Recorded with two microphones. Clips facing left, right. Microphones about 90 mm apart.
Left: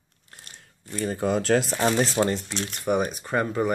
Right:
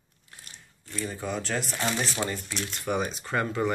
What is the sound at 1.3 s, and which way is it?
Speech, 85° left.